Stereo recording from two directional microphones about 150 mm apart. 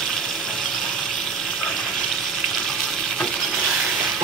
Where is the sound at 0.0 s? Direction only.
5° left (ahead or behind).